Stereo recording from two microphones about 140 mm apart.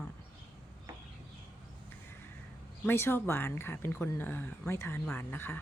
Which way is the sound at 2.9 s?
15° left (ahead or behind).